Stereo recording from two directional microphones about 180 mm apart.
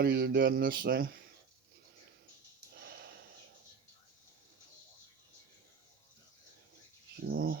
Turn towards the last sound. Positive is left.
turn(degrees=-60)  # may be behind; listen again after turning